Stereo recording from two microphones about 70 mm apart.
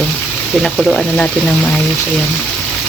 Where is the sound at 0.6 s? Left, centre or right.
Centre.